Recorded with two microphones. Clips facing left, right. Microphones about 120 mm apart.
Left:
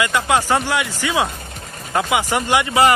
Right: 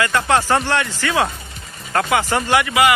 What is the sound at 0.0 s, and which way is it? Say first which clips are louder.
Speech: right 1 dB; 15° left (ahead or behind).